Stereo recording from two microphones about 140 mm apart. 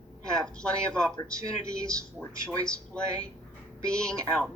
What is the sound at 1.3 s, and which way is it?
Speech, 25° right (ahead or behind).